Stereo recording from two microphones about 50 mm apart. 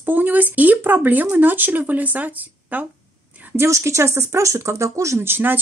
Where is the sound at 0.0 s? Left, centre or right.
Right.